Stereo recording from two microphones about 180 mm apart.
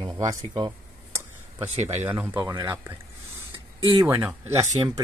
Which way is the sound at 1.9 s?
10° right (ahead or behind).